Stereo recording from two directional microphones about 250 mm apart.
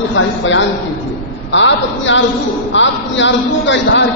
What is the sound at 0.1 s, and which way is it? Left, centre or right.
A man's voice, left.